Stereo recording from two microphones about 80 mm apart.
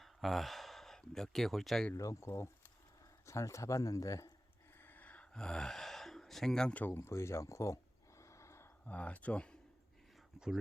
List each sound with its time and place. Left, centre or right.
0.0 s speech: centre
2.0 s speech: left
4.8 s gasp: left
6.8 s speech: left
8.2 s gasp: left
8.9 s speech: centre
10.4 s speech: centre